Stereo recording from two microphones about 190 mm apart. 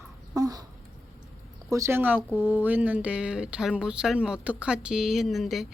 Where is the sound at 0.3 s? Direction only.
20° right (ahead or behind).